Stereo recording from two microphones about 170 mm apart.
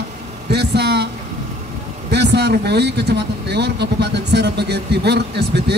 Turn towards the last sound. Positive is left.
turn(degrees=-75)  # may be behind; listen again after turning